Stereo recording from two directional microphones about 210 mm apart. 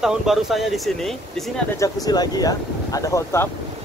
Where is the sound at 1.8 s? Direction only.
20° left (ahead or behind).